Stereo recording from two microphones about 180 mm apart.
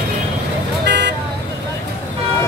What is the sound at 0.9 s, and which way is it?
Vehicle, 70° right (ahead or behind).